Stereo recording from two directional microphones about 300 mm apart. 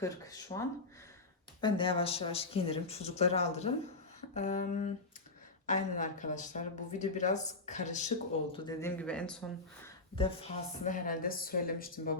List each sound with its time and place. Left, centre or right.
0.0 s speech: centre
1.6 s speech: centre
8.5 s speech: centre
9.8 s speech: centre